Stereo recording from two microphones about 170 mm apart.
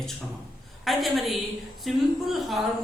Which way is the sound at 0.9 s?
Centre (ahead or behind).